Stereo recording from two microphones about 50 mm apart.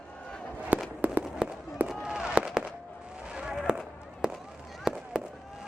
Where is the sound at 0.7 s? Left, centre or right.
Right.